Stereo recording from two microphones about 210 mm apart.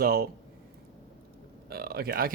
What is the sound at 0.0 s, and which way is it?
Speech, 45° right (ahead or behind).